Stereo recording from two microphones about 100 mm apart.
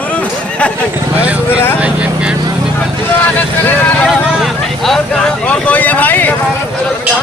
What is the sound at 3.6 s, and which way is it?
Speech, 15° left (ahead or behind).